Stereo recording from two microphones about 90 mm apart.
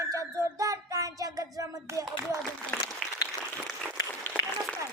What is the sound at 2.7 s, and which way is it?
Applause, 10° left (ahead or behind).